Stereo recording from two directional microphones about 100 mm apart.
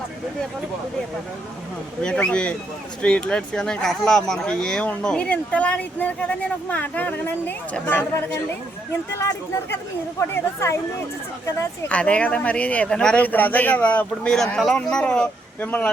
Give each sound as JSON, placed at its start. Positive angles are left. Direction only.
{"t": 2.0, "sound": "speech", "side_deg": 10}
{"t": 9.1, "sound": "speech", "side_deg": 25}
{"t": 11.9, "sound": "speech", "side_deg": 10}